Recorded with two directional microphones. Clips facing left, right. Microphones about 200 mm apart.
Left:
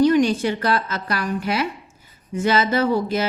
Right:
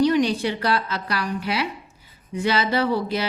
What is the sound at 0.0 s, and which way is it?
A woman's voice, 50° left (ahead or behind).